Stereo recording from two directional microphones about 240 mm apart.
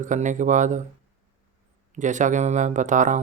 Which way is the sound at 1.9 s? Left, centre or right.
Right.